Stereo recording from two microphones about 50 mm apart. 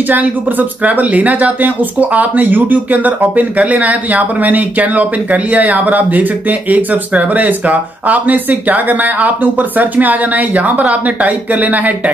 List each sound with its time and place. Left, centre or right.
0.1 s speech: right